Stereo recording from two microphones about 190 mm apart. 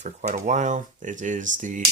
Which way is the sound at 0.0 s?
40° right (ahead or behind).